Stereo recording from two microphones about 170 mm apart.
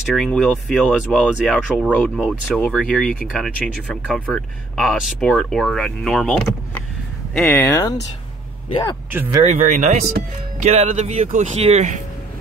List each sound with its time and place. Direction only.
0.1 s speech: centre (ahead or behind)
9.1 s speech: 10° right (ahead or behind)
9.6 s speech: 45° right (ahead or behind)